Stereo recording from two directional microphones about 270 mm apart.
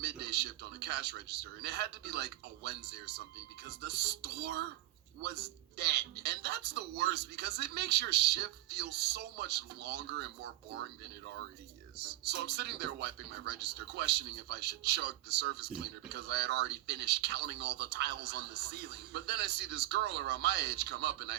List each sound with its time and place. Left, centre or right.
0.0 s a man's voice: right
11.9 s a man's voice: right